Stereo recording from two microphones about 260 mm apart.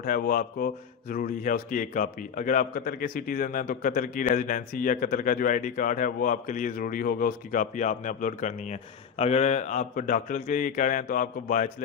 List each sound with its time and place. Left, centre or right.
0.0 s speech: left